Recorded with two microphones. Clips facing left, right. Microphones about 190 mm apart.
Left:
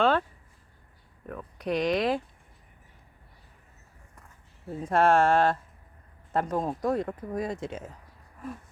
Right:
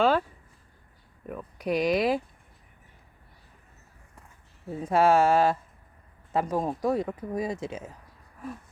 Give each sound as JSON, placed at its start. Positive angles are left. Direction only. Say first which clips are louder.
{"t": 0.0, "sound": "a sound", "louder": "right 1 dB", "side_deg": -5}
{"t": 1.3, "sound": "speech", "louder": "right 1 dB", "side_deg": -5}
{"t": 4.8, "sound": "speech", "louder": "right 1 dB", "side_deg": -5}